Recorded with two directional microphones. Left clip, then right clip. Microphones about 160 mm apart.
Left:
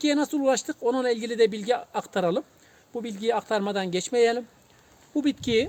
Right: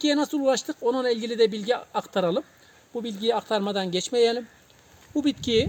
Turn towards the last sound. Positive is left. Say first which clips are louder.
# right 1 dB
turn(degrees=5)  # may be behind; listen again after turning